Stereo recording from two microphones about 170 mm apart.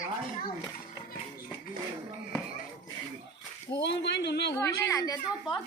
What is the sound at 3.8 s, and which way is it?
Speech, 90° left.